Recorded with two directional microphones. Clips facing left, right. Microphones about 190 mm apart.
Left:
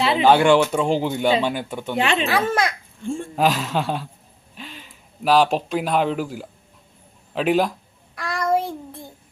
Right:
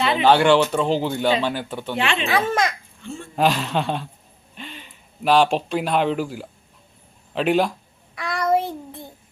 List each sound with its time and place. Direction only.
0.2 s speech: 10° left (ahead or behind)
2.0 s speech: 40° left (ahead or behind)
2.2 s speech: centre (ahead or behind)
8.1 s child singing: centre (ahead or behind)